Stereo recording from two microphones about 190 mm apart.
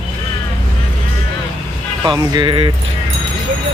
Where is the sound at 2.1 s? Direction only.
20° right (ahead or behind).